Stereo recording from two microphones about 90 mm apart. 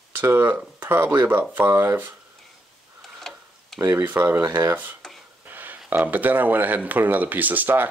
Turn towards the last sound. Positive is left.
turn(degrees=-20)  # may be behind; listen again after turning